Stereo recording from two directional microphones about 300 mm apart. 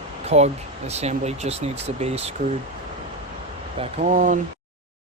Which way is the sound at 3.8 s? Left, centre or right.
Right.